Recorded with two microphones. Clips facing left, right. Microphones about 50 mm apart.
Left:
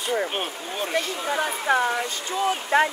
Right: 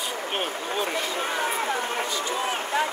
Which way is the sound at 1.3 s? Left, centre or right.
Left.